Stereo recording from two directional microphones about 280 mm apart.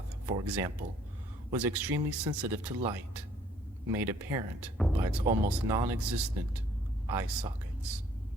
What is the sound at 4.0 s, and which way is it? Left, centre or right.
Speech, centre.